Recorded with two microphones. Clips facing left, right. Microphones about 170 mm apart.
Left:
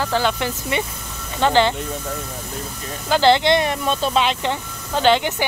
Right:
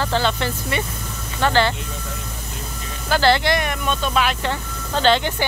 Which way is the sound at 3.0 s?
20° left (ahead or behind).